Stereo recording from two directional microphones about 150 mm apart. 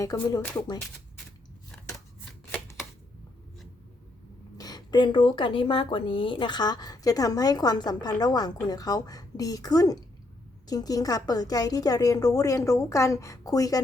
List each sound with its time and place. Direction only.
0.0 s speech: 25° left (ahead or behind)
4.5 s speech: 25° left (ahead or behind)